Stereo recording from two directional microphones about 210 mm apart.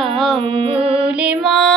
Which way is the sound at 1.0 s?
5° right (ahead or behind).